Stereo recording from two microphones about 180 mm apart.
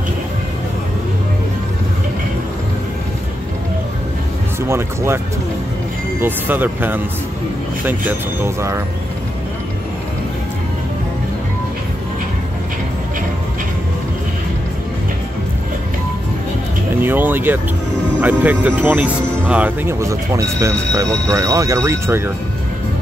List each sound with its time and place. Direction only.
4.6 s speech: 15° right (ahead or behind)
6.2 s speech: 10° right (ahead or behind)
17.0 s speech: 10° right (ahead or behind)